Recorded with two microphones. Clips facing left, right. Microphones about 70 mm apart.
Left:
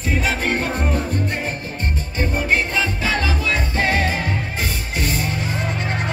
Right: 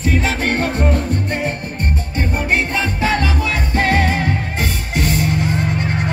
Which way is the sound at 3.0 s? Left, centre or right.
Right.